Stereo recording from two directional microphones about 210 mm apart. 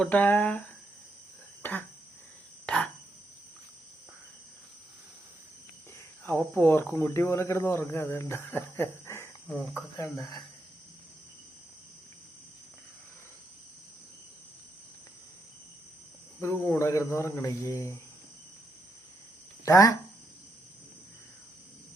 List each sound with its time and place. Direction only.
0.0 s speech: 5° left (ahead or behind)
1.6 s a sound: 10° left (ahead or behind)
6.2 s speech: 10° left (ahead or behind)
16.4 s speech: 10° left (ahead or behind)
19.6 s speech: 15° left (ahead or behind)